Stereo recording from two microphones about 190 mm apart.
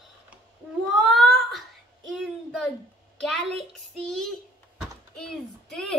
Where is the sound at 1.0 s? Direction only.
Centre (ahead or behind).